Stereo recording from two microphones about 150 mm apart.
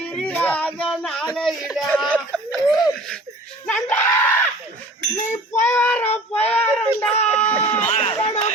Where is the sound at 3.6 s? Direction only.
10° left (ahead or behind).